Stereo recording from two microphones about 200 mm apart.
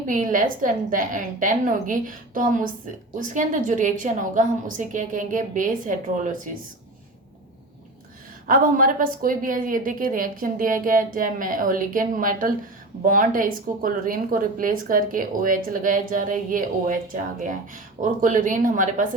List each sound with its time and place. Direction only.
0.1 s a woman's voice: 40° right (ahead or behind)
8.4 s a woman's voice: 45° right (ahead or behind)
18.0 s a woman's voice: 40° right (ahead or behind)